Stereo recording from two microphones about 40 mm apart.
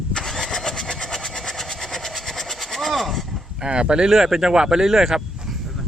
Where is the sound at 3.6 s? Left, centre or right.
Right.